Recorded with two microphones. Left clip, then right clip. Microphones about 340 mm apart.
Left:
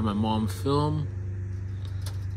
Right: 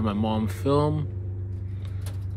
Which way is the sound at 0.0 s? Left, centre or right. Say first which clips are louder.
Right 1 dB; centre.